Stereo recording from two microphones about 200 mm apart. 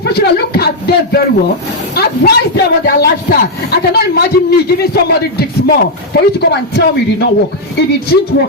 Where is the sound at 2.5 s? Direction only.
50° left (ahead or behind).